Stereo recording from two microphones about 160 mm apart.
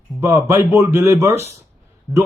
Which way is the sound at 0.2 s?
20° right (ahead or behind).